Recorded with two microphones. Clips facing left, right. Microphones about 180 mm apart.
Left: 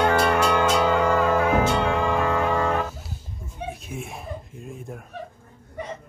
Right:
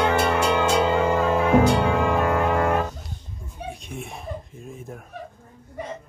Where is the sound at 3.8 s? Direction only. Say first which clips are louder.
Even; centre (ahead or behind).